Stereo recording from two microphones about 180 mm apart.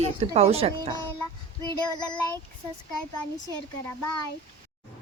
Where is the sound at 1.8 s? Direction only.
25° left (ahead or behind).